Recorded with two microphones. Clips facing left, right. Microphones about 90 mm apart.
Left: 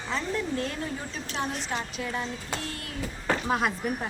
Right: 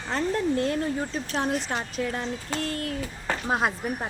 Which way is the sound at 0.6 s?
35° right (ahead or behind).